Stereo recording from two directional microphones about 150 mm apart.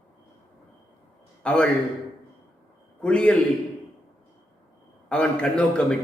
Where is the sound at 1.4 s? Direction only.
5° left (ahead or behind).